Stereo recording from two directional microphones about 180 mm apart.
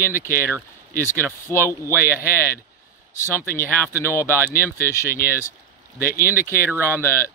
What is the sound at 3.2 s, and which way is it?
Speech, 15° left (ahead or behind).